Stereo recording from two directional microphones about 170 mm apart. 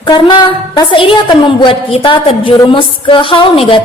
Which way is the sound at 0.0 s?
25° left (ahead or behind).